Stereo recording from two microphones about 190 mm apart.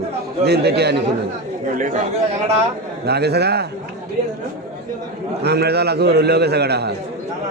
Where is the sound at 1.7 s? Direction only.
40° right (ahead or behind).